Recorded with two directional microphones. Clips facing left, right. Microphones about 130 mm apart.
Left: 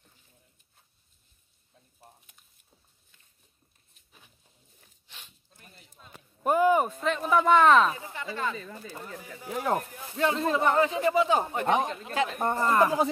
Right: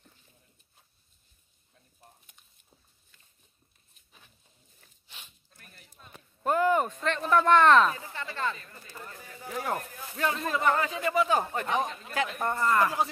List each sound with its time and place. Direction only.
2.0 s a sound: 5° left (ahead or behind)
5.5 s whip: 20° left (ahead or behind)
6.4 s speech: 15° left (ahead or behind)
7.9 s speech: 15° left (ahead or behind)
9.6 s speech: 20° left (ahead or behind)